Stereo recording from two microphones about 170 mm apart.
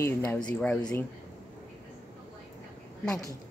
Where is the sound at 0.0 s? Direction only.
15° left (ahead or behind).